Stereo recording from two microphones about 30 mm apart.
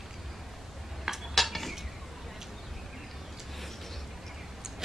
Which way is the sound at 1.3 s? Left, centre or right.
Centre.